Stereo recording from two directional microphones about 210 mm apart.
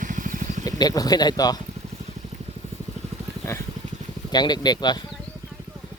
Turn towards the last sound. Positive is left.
turn(degrees=20)  # may be behind; listen again after turning